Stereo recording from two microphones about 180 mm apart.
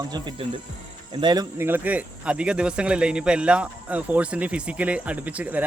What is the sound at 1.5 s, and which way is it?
Speech, 10° right (ahead or behind).